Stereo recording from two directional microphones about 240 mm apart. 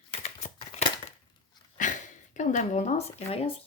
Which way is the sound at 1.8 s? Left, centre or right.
Left.